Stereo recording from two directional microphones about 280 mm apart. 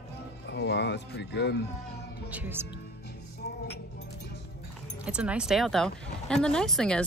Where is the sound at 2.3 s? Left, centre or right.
Centre.